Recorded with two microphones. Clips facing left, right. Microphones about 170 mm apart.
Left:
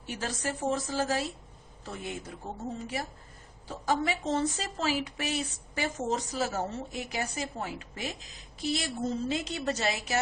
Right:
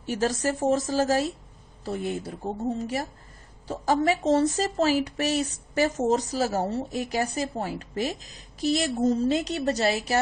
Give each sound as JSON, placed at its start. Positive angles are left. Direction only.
{"t": 0.1, "sound": "speech", "side_deg": -45}